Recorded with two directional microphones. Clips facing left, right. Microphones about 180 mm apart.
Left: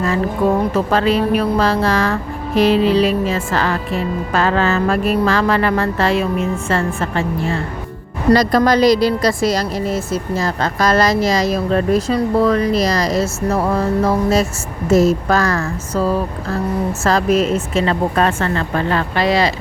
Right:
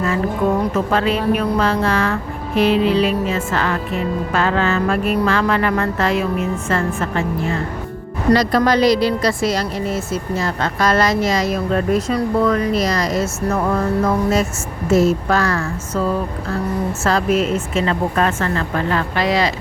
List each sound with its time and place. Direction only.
0.7 s speech: 35° left (ahead or behind)
8.3 s speech: 40° left (ahead or behind)